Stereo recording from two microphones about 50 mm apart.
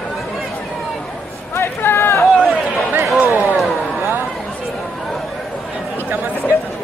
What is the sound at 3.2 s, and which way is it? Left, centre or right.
Speech, right.